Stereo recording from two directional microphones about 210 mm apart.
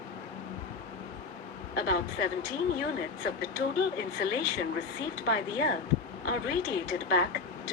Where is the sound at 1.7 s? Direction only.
50° left (ahead or behind).